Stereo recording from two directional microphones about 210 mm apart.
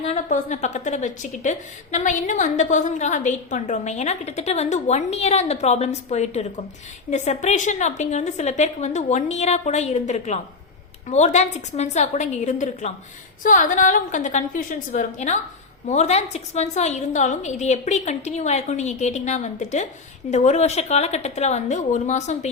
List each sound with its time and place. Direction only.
0.0 s a woman's voice: 30° left (ahead or behind)